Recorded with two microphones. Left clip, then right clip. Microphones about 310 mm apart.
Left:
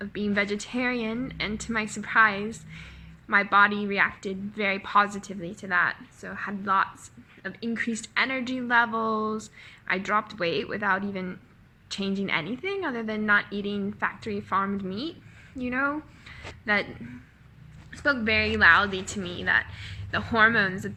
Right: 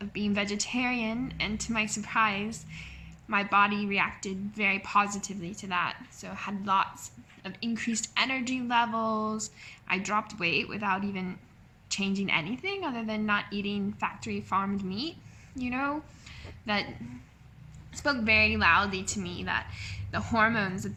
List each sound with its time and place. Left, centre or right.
0.0 s a woman's voice: centre
15.5 s a sound: centre
17.9 s a woman's voice: centre